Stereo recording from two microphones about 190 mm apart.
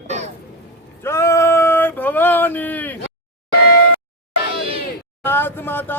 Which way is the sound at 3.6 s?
60° left (ahead or behind).